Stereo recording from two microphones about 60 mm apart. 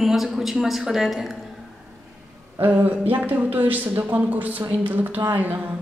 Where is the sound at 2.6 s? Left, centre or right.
Right.